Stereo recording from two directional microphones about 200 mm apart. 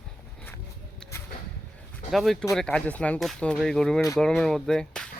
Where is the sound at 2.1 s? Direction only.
Centre (ahead or behind).